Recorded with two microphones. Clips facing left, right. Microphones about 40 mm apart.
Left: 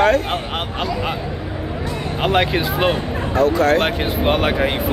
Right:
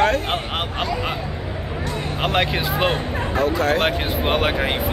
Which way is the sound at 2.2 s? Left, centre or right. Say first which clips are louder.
Left 4 dB; centre.